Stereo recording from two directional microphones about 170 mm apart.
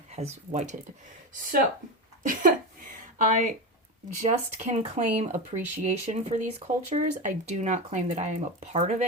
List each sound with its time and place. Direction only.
0.1 s speech: 40° right (ahead or behind)
1.3 s speech: 55° right (ahead or behind)
4.2 s speech: 40° right (ahead or behind)